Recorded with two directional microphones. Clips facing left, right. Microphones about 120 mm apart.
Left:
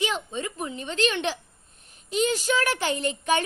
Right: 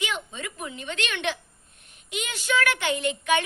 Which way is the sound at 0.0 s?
35° left (ahead or behind).